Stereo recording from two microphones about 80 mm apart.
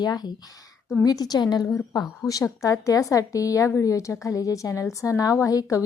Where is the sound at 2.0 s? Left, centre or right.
Left.